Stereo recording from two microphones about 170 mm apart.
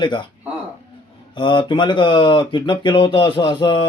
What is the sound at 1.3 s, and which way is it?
Speech, 25° left (ahead or behind).